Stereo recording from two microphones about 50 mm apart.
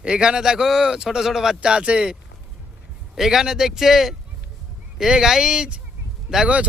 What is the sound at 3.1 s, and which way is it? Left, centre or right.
Speech, centre.